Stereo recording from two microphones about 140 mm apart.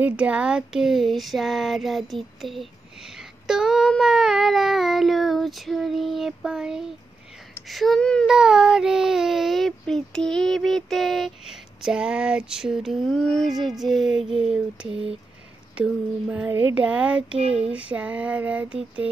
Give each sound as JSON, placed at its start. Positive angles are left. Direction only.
{"t": 0.0, "sound": "speech", "side_deg": -10}
{"t": 14.9, "sound": "speech", "side_deg": -40}
{"t": 15.7, "sound": "speech", "side_deg": -10}
{"t": 17.4, "sound": "a sound", "side_deg": -45}
{"t": 17.7, "sound": "speech", "side_deg": -10}